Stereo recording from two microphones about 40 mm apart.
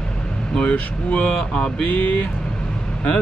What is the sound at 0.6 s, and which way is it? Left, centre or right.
Speech, left.